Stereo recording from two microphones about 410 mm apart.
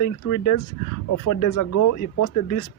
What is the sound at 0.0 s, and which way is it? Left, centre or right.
Speech, left.